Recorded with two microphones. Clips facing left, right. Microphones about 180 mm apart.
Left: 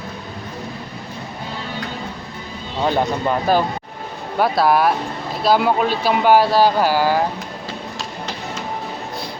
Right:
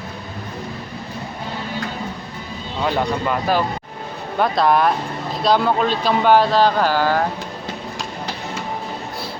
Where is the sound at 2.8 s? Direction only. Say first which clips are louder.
Left 2 dB; 35° left (ahead or behind).